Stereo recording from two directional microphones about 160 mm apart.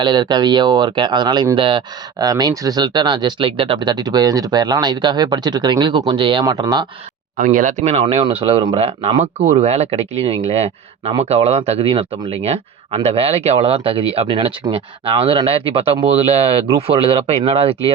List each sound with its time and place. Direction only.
0.0 s speech: 25° right (ahead or behind)
7.3 s speech: 55° right (ahead or behind); by 17.9 s 35° right (ahead or behind)